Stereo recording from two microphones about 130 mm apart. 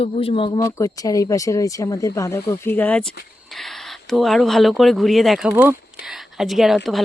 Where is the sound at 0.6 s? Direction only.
25° left (ahead or behind); by 5.5 s centre (ahead or behind).